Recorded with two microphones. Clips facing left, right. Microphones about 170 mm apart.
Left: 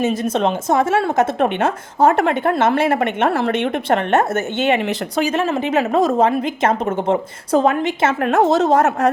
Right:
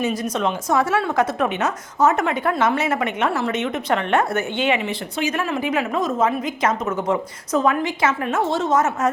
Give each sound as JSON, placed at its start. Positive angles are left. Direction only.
{"t": 0.0, "sound": "a woman's voice", "side_deg": 25}
{"t": 2.0, "sound": "a woman's voice", "side_deg": 55}
{"t": 3.9, "sound": "a woman's voice", "side_deg": 45}
{"t": 5.1, "sound": "a woman's voice", "side_deg": 30}
{"t": 5.9, "sound": "a woman's voice", "side_deg": 40}
{"t": 8.0, "sound": "a woman's voice", "side_deg": 70}
{"t": 8.4, "sound": "a woman's voice", "side_deg": 40}
{"t": 8.8, "sound": "speech", "side_deg": 65}